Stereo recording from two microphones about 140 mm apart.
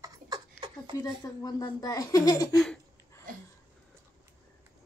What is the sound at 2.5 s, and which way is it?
Speech, 5° left (ahead or behind).